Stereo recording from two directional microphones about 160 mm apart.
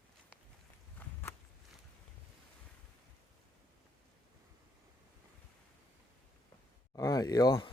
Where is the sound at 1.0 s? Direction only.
10° left (ahead or behind).